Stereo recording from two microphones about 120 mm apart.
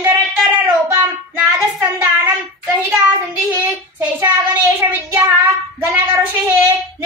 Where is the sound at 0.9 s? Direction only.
20° right (ahead or behind).